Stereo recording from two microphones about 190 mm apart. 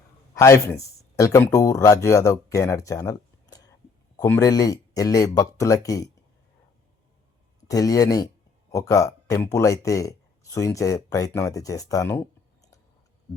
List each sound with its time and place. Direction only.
0.3 s speech: 15° left (ahead or behind)
7.7 s speech: 20° left (ahead or behind)